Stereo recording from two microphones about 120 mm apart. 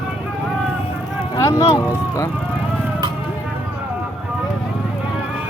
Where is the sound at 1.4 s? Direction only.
30° left (ahead or behind).